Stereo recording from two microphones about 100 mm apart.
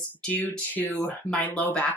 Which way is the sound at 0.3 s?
20° left (ahead or behind).